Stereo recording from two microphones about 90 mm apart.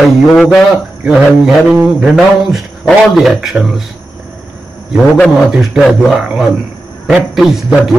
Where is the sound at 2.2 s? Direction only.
Centre (ahead or behind).